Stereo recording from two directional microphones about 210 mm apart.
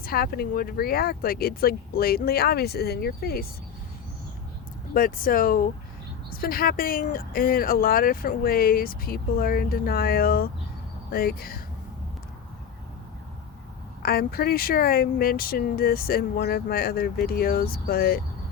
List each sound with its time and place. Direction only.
0.0 s speech: 45° left (ahead or behind)
4.9 s speech: 40° left (ahead or behind)
14.0 s speech: 45° left (ahead or behind)